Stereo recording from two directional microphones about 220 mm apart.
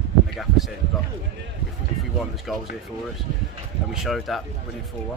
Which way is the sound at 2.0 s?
Centre (ahead or behind).